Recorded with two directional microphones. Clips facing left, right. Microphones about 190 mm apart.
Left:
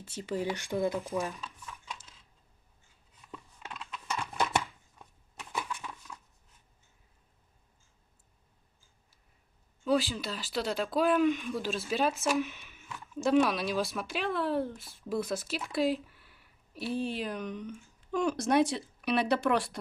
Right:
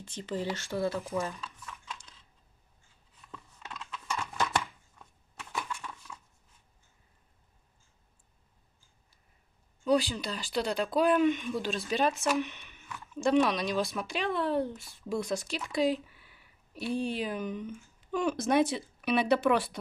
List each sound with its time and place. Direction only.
0.0 s speech: 5° left (ahead or behind)
3.3 s scissors: 15° left (ahead or behind)
9.8 s speech: centre (ahead or behind)